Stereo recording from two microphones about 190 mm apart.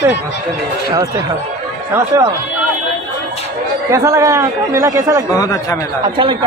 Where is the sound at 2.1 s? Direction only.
15° right (ahead or behind).